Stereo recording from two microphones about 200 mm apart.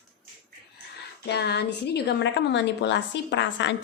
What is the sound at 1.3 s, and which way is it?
A woman's voice, 55° left (ahead or behind).